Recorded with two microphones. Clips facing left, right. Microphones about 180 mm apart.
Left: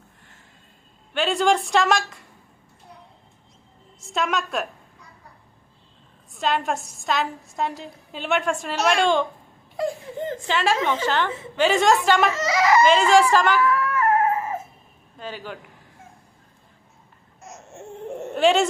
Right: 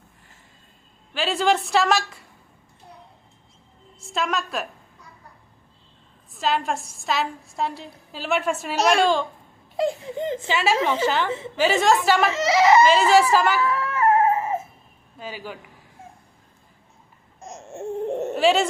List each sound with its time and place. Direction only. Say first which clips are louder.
1.1 s a woman's voice: left 1 dB; centre (ahead or behind)
4.0 s a woman's voice: left 1 dB; centre (ahead or behind)
6.3 s a woman's voice: even; centre (ahead or behind)
9.7 s speech: right 2 dB; 20° right (ahead or behind)
10.4 s a woman's voice: even; 5° right (ahead or behind)
12.3 s speech: right 3 dB; 25° right (ahead or behind)
12.8 s a woman's voice: even; 5° right (ahead or behind)
13.6 s a sound: left 1 dB; 25° right (ahead or behind)
15.2 s a woman's voice: even; 10° right (ahead or behind)
18.3 s speech: left 1 dB; centre (ahead or behind)